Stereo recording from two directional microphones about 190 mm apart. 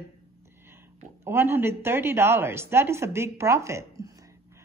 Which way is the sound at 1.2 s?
10° right (ahead or behind).